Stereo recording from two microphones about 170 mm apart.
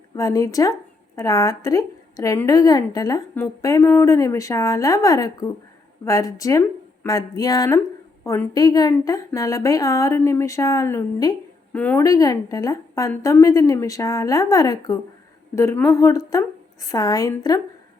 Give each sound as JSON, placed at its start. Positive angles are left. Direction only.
{"t": 0.2, "sound": "a woman's voice", "side_deg": 20}
{"t": 12.0, "sound": "a woman's voice", "side_deg": 20}